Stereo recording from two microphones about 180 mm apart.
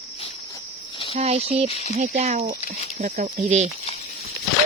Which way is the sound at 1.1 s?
35° right (ahead or behind).